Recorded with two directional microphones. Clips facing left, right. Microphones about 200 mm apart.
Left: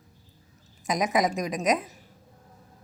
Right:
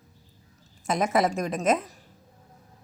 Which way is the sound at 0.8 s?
15° left (ahead or behind).